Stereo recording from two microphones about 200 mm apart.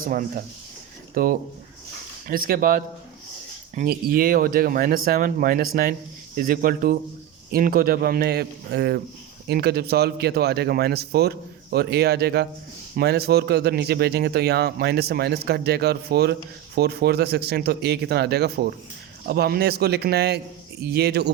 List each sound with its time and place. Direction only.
0.0 s speech: 45° right (ahead or behind)